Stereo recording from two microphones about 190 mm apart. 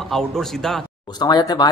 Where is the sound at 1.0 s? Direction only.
20° left (ahead or behind).